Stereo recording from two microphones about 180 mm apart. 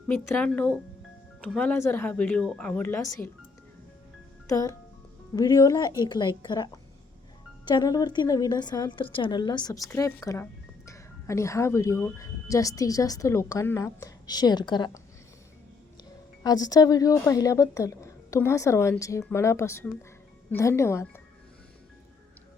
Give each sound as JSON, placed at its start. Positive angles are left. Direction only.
{"t": 0.1, "sound": "speech", "side_deg": 10}
{"t": 4.4, "sound": "a child's voice", "side_deg": 20}
{"t": 7.7, "sound": "a woman's voice", "side_deg": 20}
{"t": 16.4, "sound": "speech", "side_deg": 20}